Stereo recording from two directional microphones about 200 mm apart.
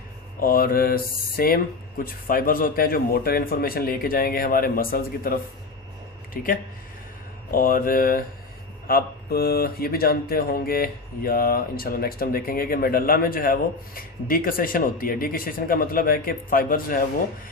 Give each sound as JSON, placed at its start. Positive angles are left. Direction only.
{"t": 0.3, "sound": "speech", "side_deg": 45}